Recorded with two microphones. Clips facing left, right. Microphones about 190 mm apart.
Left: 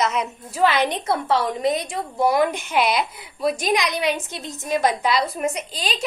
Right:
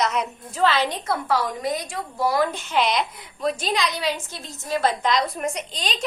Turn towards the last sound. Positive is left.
turn(degrees=5)  # may be behind; listen again after turning